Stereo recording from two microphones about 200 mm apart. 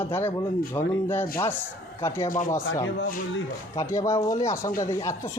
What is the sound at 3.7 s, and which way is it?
Speech, 15° left (ahead or behind).